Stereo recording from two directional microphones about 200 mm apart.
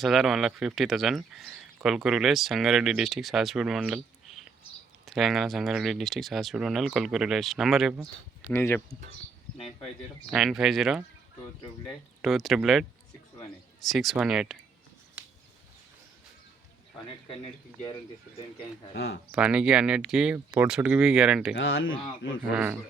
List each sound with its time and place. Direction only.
0.0 s speech: centre (ahead or behind)
8.4 s speech: 10° left (ahead or behind)
10.3 s speech: centre (ahead or behind)
13.8 s speech: centre (ahead or behind)
15.2 s a sound: 10° right (ahead or behind)
18.9 s speech: 60° left (ahead or behind)
19.3 s speech: 5° right (ahead or behind)
21.5 s speech: 70° left (ahead or behind)
22.4 s speech: 10° right (ahead or behind)